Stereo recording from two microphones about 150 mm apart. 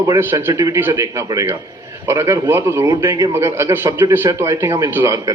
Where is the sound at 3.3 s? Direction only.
15° right (ahead or behind).